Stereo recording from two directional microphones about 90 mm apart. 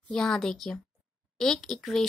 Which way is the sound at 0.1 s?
5° left (ahead or behind).